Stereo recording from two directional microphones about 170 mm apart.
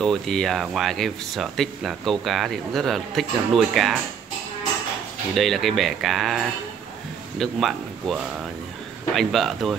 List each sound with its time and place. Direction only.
0.0 s speech: centre (ahead or behind)
5.3 s speech: centre (ahead or behind)